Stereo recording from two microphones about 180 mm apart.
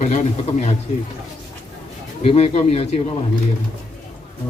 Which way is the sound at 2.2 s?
35° left (ahead or behind).